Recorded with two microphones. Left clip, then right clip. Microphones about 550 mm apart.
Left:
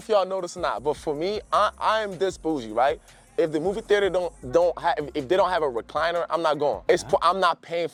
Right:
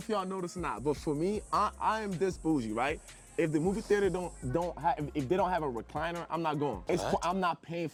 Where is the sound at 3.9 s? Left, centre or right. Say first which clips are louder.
Left 8 dB; left.